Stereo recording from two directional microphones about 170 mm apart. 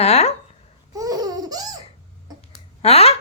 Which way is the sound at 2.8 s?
35° left (ahead or behind).